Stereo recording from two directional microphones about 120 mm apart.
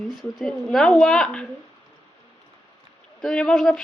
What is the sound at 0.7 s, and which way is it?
Speech, centre (ahead or behind).